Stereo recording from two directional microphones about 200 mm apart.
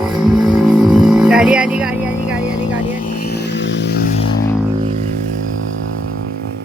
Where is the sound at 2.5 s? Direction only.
20° left (ahead or behind).